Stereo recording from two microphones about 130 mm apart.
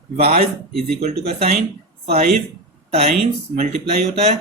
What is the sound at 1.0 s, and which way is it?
Speech, 60° right (ahead or behind).